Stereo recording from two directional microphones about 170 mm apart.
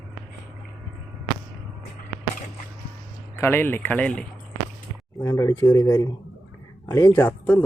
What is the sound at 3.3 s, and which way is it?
Speech, 15° left (ahead or behind).